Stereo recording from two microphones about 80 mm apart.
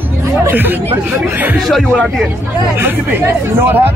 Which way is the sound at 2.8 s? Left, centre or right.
Right.